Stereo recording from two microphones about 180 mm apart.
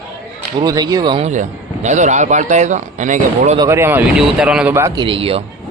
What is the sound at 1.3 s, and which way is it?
Speech, 40° right (ahead or behind).